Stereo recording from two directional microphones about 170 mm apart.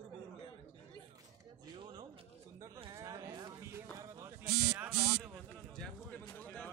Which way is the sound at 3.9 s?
15° right (ahead or behind).